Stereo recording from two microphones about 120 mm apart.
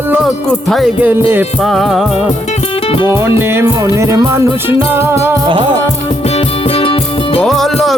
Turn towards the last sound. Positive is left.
turn(degrees=0)  # may be behind; listen again after turning